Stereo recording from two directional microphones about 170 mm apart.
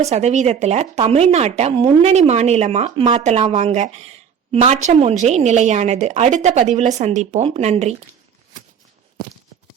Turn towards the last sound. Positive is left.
turn(degrees=-40)  # may be behind; listen again after turning